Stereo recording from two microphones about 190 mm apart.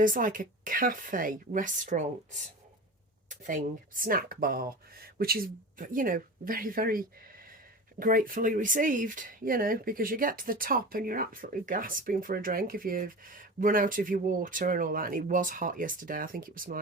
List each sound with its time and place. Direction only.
0.0 s speech: 45° right (ahead or behind)